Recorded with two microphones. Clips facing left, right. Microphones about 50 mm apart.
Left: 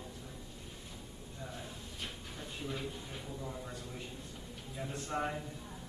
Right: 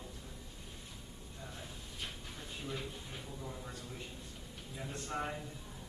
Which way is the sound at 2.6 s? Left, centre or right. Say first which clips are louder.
Left 2 dB; centre.